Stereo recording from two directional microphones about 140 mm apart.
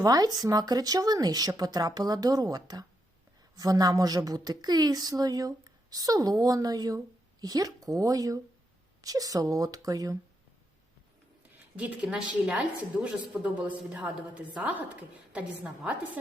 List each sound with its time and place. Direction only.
0.0 s a woman's voice: 25° right (ahead or behind)
11.8 s speech: 5° right (ahead or behind)